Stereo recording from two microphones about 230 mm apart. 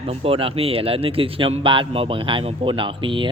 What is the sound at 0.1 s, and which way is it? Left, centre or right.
Speech, right.